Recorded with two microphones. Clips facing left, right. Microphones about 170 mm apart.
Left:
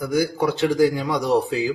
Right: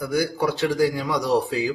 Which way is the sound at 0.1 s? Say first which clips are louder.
Left 2 dB; 20° left (ahead or behind).